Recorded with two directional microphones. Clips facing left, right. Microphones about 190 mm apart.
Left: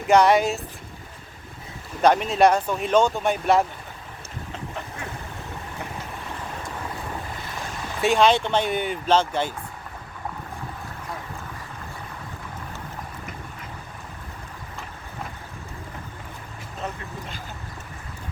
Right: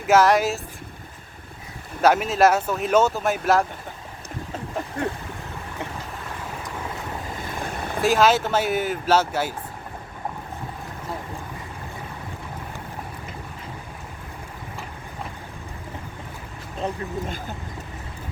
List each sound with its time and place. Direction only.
0.1 s speech: centre (ahead or behind)
2.0 s speech: 5° right (ahead or behind)
7.6 s boat: 55° right (ahead or behind)
8.0 s speech: 5° right (ahead or behind)
16.8 s vehicle: 30° right (ahead or behind)